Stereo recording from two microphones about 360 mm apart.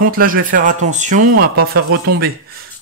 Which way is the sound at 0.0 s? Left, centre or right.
Right.